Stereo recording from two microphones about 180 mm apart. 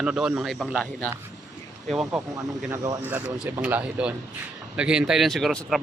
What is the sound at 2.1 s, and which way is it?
Speech, 15° right (ahead or behind).